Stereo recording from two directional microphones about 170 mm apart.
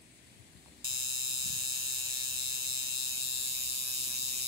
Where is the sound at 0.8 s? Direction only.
30° right (ahead or behind).